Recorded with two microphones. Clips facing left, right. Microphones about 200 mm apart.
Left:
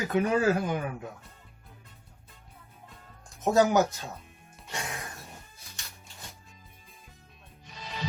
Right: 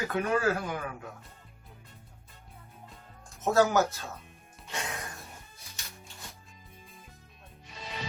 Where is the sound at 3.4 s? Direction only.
15° left (ahead or behind).